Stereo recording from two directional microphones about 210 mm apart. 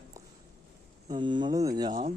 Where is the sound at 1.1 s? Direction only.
20° right (ahead or behind).